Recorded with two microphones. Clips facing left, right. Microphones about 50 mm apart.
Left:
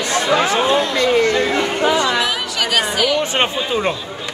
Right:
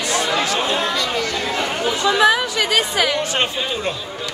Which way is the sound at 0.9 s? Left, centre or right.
Left.